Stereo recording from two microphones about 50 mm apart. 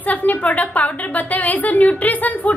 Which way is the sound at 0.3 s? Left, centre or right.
Left.